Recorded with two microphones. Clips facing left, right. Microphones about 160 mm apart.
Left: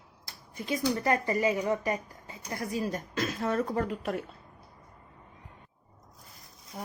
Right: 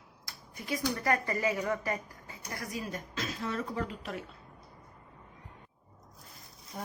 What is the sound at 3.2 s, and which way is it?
Speech, 50° left (ahead or behind).